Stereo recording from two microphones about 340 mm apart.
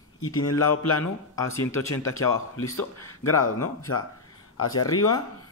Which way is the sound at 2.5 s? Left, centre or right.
Left.